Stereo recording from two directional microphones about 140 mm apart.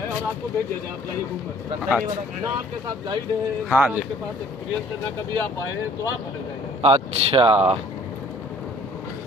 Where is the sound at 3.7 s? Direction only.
10° right (ahead or behind).